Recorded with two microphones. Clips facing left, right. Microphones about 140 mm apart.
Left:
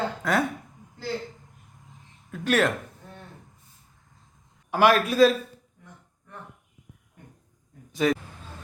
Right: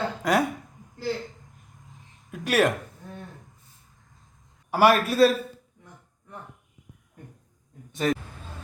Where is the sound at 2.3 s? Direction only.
10° right (ahead or behind).